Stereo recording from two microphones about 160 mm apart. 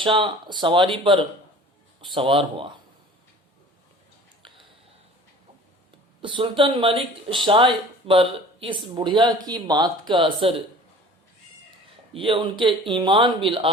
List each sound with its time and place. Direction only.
0.0 s speech: 30° right (ahead or behind)
6.2 s speech: 30° right (ahead or behind)
12.1 s speech: 30° right (ahead or behind)